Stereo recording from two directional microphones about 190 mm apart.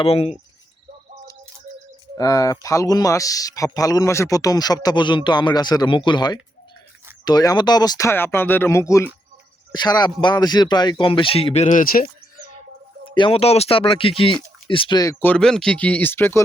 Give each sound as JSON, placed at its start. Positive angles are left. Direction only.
{"t": 0.0, "sound": "speech", "side_deg": 30}
{"t": 2.1, "sound": "speech", "side_deg": 20}
{"t": 13.1, "sound": "speech", "side_deg": 25}